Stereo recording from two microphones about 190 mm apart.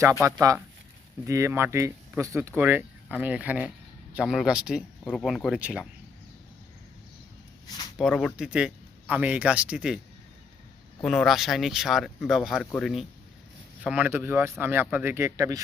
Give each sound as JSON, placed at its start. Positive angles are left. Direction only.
{"t": 0.3, "sound": "speech", "side_deg": -15}
{"t": 7.9, "sound": "speech", "side_deg": 0}
{"t": 11.0, "sound": "speech", "side_deg": 5}